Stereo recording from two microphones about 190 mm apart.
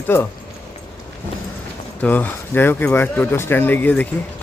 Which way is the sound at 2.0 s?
10° left (ahead or behind).